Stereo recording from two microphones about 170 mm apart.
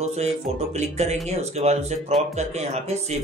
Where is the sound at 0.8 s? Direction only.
40° right (ahead or behind).